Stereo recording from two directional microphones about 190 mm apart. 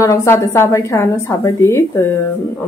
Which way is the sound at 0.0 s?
15° left (ahead or behind).